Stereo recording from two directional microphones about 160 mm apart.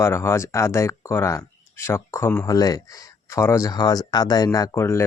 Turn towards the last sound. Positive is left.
turn(degrees=15)  # may be behind; listen again after turning